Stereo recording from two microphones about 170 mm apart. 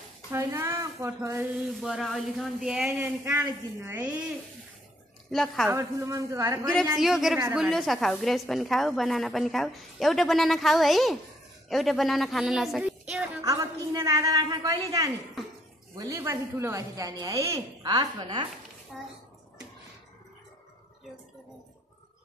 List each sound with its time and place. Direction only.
0.3 s a woman's voice: 15° right (ahead or behind)
1.7 s a woman's voice: centre (ahead or behind)
3.0 s a woman's voice: 15° right (ahead or behind)
5.3 s a woman's voice: centre (ahead or behind)
5.7 s a woman's voice: 15° right (ahead or behind)
6.6 s a woman's voice: 5° left (ahead or behind)
13.1 s a sound: 5° right (ahead or behind)
13.4 s a woman's voice: 20° right (ahead or behind)
18.9 s a woman's voice: centre (ahead or behind)